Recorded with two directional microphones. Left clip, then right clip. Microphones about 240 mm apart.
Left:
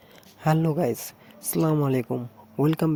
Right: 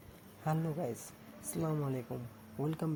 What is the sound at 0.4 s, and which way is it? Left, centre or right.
Speech, left.